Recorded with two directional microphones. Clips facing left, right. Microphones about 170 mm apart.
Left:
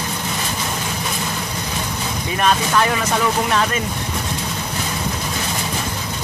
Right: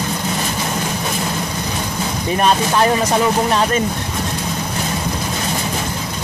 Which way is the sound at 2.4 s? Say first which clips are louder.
Right 2 dB; 35° right (ahead or behind).